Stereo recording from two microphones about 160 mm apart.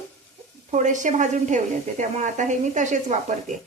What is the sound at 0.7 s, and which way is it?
A woman's voice, 50° right (ahead or behind).